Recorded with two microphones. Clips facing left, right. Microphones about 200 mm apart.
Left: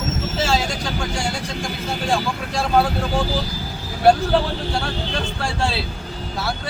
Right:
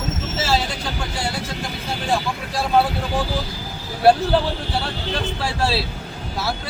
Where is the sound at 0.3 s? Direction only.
Centre (ahead or behind).